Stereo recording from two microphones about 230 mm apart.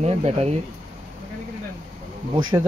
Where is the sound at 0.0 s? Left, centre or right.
Right.